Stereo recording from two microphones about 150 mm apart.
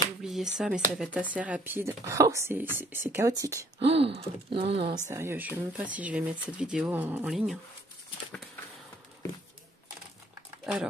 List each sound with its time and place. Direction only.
0.2 s speech: 5° right (ahead or behind); by 3.5 s 20° right (ahead or behind)
3.8 s speech: 40° right (ahead or behind)
5.1 s speech: 15° right (ahead or behind)
7.2 s speech: centre (ahead or behind)
10.6 s a sound: 5° right (ahead or behind)